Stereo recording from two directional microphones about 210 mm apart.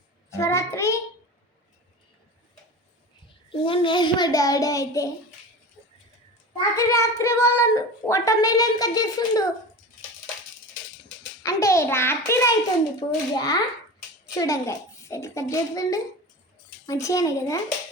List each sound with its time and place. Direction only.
0.3 s child singing: 15° left (ahead or behind)
3.2 s a child's voice: 25° left (ahead or behind)
6.7 s speech: 15° left (ahead or behind)
11.4 s a child's voice: 15° left (ahead or behind)